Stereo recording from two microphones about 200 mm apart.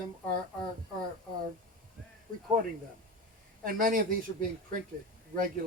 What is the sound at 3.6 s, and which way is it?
Speech, 45° right (ahead or behind).